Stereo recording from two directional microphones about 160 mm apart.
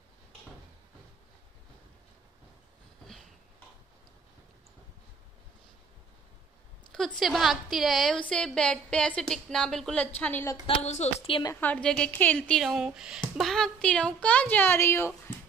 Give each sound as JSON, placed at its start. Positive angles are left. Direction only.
{"t": 7.2, "sound": "a woman's voice", "side_deg": 0}
{"t": 10.7, "sound": "a woman's voice", "side_deg": 45}
{"t": 11.6, "sound": "speech", "side_deg": 10}